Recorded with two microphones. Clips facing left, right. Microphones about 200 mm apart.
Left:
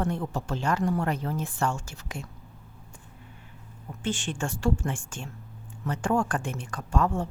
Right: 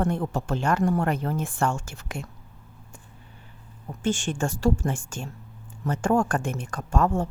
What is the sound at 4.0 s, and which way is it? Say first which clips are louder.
A woman's voice: right 5 dB; 45° right (ahead or behind).